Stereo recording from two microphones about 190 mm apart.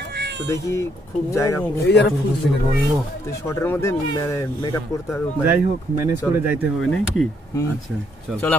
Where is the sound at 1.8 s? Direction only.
60° left (ahead or behind).